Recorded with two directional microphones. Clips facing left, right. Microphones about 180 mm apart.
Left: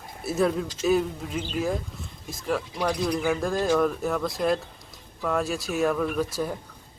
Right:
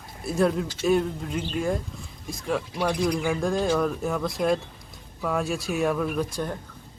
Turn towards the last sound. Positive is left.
turn(degrees=5)  # may be behind; listen again after turning